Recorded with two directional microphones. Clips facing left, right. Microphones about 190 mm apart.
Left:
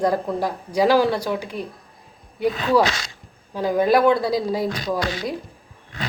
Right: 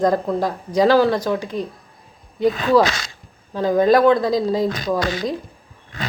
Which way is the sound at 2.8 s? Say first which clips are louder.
Right 1 dB; 50° right (ahead or behind).